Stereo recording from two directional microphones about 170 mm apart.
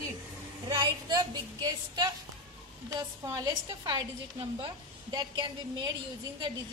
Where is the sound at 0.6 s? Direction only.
25° right (ahead or behind).